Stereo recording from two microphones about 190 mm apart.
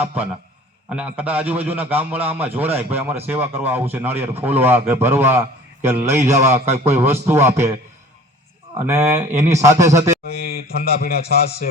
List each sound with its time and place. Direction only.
0.9 s a man's voice: 5° right (ahead or behind)
8.8 s a man's voice: 10° right (ahead or behind)
10.2 s a man's voice: 55° left (ahead or behind)